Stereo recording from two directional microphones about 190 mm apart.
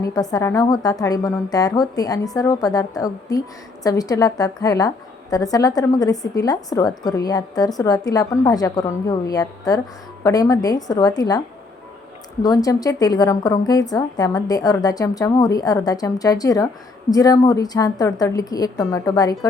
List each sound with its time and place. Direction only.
0.0 s a woman's voice: 20° left (ahead or behind)